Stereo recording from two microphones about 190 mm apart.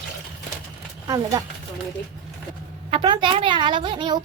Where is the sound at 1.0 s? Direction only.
20° right (ahead or behind).